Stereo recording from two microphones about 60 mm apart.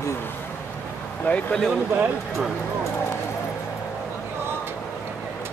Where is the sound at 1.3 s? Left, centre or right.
Left.